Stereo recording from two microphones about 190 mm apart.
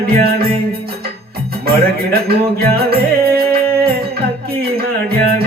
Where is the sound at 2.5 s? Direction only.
55° right (ahead or behind).